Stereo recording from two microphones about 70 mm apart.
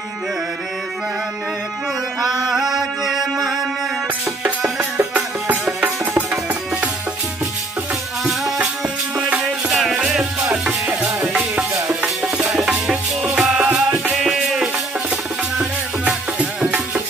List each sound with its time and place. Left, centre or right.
2.2 s music: centre
9.4 s music: centre
12.0 s music: centre
16.1 s music: centre